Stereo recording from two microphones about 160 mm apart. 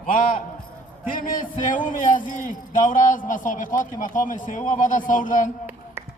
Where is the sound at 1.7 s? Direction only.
55° left (ahead or behind).